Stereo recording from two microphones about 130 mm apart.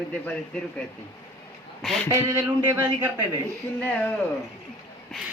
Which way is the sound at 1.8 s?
5° left (ahead or behind).